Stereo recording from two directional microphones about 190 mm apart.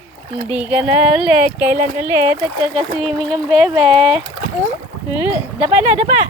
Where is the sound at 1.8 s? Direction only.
40° right (ahead or behind).